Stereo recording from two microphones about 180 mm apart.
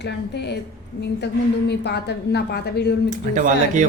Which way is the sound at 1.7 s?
65° left (ahead or behind).